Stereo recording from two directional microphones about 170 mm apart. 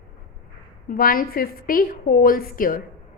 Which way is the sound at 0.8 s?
55° left (ahead or behind).